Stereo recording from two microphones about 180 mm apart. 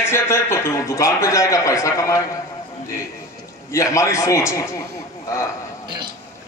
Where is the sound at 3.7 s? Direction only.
15° left (ahead or behind).